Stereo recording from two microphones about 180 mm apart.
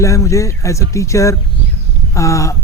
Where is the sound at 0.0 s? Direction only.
15° left (ahead or behind).